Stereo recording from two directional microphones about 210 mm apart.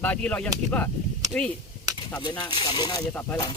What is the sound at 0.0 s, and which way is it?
Speech, 5° left (ahead or behind).